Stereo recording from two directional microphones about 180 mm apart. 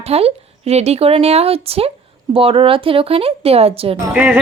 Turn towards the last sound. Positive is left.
turn(degrees=-5)  # may be behind; listen again after turning